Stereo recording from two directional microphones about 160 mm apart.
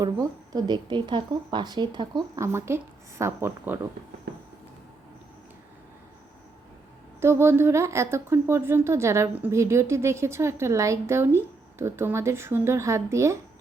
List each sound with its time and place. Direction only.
0.0 s a woman's voice: 25° right (ahead or behind)
4.3 s a sound: 90° right
7.2 s speech: 15° right (ahead or behind)